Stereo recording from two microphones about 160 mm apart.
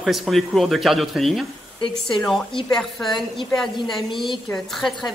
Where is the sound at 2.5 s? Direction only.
35° left (ahead or behind).